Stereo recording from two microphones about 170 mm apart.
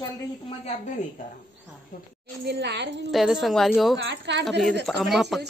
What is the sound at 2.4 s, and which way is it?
Speech, 85° right.